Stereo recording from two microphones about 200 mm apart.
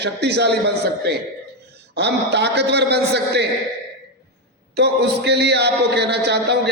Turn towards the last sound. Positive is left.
turn(degrees=-55)  # may be behind; listen again after turning